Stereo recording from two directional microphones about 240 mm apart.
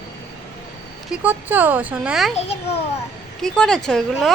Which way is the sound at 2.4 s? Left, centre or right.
Left.